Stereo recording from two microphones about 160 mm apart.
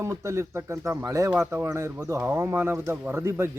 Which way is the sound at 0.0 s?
20° right (ahead or behind).